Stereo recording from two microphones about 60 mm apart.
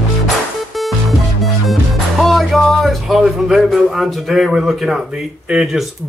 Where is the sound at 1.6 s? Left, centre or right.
Centre.